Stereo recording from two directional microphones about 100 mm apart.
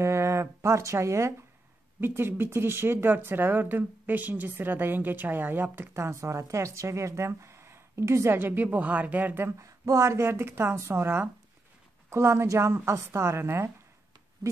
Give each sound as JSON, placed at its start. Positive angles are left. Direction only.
{"t": 0.0, "sound": "speech", "side_deg": -25}
{"t": 9.6, "sound": "speech", "side_deg": -30}